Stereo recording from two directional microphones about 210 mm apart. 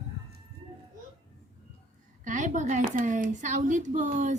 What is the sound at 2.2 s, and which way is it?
A woman's voice, 35° right (ahead or behind).